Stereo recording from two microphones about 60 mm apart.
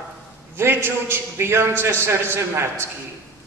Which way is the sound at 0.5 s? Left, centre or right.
Right.